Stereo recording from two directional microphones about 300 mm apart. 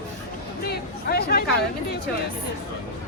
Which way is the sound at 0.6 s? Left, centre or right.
Left.